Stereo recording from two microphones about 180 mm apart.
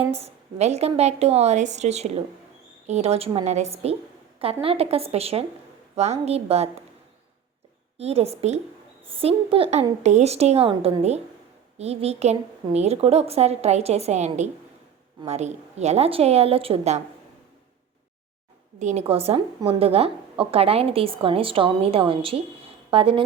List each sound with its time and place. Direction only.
0.1 s a woman's voice: 35° right (ahead or behind)
7.9 s a woman's voice: 35° right (ahead or behind)
18.8 s a woman's voice: 40° right (ahead or behind)